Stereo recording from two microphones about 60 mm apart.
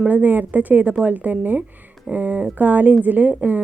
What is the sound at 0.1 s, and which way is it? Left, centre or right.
A woman's voice, right.